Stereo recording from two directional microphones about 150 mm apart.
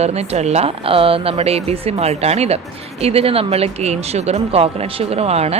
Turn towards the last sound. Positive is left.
turn(degrees=-45)  # may be behind; listen again after turning